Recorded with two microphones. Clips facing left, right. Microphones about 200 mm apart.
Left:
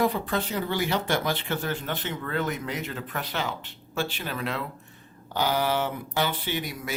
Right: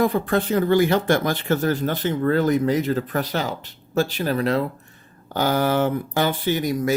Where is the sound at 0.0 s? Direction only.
50° right (ahead or behind).